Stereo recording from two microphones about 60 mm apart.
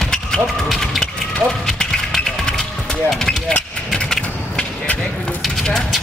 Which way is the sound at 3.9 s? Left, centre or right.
Centre.